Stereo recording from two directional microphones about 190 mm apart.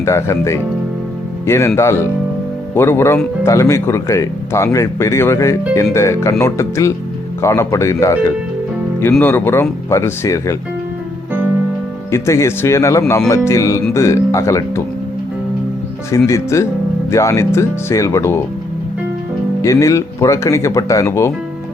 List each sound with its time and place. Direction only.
0.0 s a man's voice: 15° left (ahead or behind)
12.1 s a man's voice: 15° left (ahead or behind)
16.1 s a man's voice: 15° left (ahead or behind)
19.6 s a man's voice: 15° left (ahead or behind)